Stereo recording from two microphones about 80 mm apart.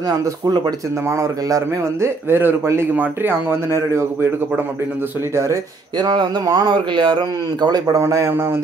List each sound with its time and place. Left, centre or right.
1.0 s a man's voice: right
5.3 s a man's voice: right
5.9 s speech: right
7.8 s a man's voice: right
8.3 s a man's voice: right